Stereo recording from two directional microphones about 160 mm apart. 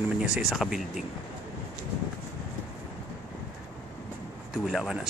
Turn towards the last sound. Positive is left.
turn(degrees=-5)  # may be behind; listen again after turning